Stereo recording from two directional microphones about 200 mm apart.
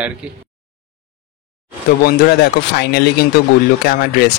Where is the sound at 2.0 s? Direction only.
55° left (ahead or behind).